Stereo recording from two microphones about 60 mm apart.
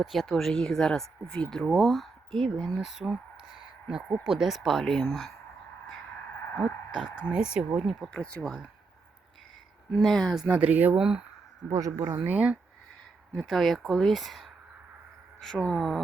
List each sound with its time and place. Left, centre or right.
0.0 s speech: centre
7.3 s speech: centre
8.1 s speech: left
9.9 s speech: centre
10.5 s speech: right
10.9 s speech: centre
11.7 s speech: right
12.2 s speech: right
13.5 s speech: centre
15.5 s speech: centre